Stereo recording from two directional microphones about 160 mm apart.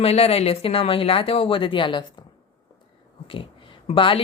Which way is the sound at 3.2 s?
35° left (ahead or behind).